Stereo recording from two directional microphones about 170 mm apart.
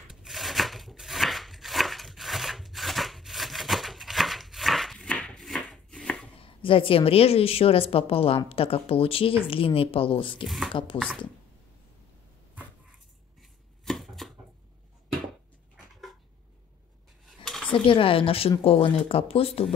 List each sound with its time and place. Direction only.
0.1 s a sound: centre (ahead or behind)
6.4 s a woman's voice: 30° left (ahead or behind)
13.4 s chopping: centre (ahead or behind)
15.7 s cat: centre (ahead or behind)
17.5 s a sound: 5° left (ahead or behind)
17.8 s a woman's voice: 30° left (ahead or behind)